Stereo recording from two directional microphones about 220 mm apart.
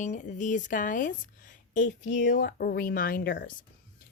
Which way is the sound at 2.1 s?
50° left (ahead or behind).